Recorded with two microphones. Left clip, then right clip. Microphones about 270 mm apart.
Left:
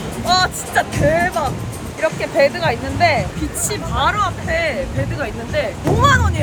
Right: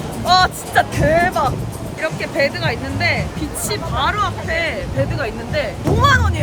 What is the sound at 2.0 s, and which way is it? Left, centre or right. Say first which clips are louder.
Speech: left 3 dB; centre.